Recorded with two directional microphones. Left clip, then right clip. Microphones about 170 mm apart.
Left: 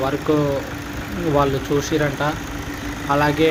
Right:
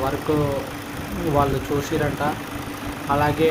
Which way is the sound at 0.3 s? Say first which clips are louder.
Left 4 dB; 15° left (ahead or behind).